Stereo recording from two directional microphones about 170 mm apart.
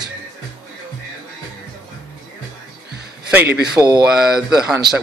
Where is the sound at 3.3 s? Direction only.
10° right (ahead or behind).